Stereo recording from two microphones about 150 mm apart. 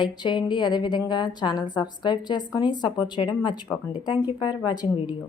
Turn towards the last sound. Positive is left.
turn(degrees=30)  # may be behind; listen again after turning